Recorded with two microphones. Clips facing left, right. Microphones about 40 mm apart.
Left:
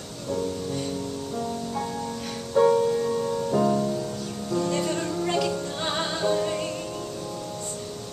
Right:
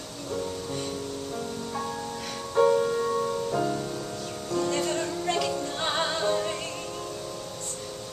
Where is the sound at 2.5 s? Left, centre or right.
Centre.